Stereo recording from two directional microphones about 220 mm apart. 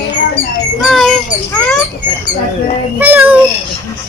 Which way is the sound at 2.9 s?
10° right (ahead or behind).